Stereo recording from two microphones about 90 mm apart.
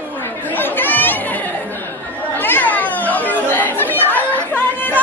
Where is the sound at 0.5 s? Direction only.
20° left (ahead or behind).